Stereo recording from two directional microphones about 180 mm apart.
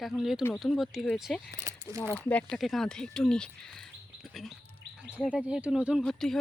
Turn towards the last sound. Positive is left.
turn(degrees=5)  # may be behind; listen again after turning